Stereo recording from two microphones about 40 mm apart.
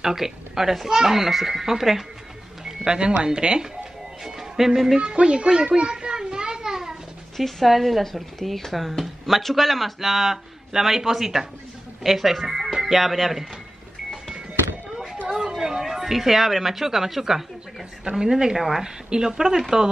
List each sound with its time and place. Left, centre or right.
0.0 s speech: centre
2.6 s music: centre
3.0 s speech: right
4.2 s speech: centre
4.9 s speech: right
5.8 s children playing: right
7.3 s speech: centre
15.5 s a woman's voice: centre